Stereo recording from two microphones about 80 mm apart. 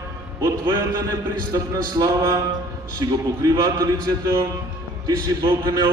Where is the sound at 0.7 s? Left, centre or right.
Right.